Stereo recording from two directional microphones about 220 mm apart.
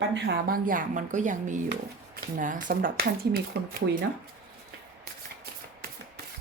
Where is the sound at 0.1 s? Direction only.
45° right (ahead or behind).